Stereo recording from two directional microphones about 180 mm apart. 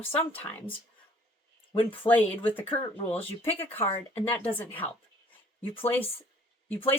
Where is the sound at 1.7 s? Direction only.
30° left (ahead or behind).